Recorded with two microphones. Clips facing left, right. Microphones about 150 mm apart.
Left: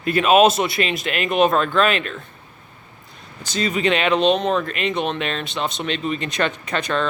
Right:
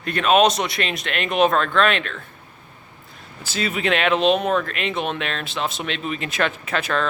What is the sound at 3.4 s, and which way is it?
Speech, 5° right (ahead or behind).